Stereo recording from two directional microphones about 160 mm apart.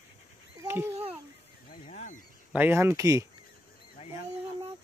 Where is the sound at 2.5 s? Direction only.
15° right (ahead or behind).